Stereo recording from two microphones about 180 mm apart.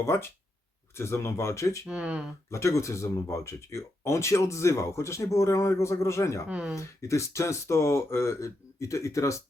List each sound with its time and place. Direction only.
0.0 s speech: 15° left (ahead or behind)
1.9 s speech: 5° right (ahead or behind)
2.5 s speech: 15° left (ahead or behind)
6.5 s speech: 5° right (ahead or behind)
6.7 s speech: 15° left (ahead or behind)